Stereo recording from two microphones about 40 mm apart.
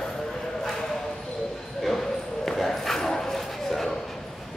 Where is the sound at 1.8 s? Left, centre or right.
Centre.